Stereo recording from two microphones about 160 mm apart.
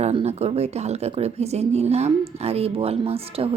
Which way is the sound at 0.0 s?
40° right (ahead or behind).